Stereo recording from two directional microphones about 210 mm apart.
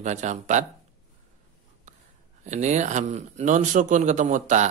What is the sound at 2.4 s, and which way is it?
A man's voice, 35° right (ahead or behind).